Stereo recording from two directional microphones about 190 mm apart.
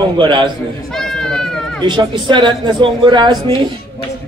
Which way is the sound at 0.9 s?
5° left (ahead or behind).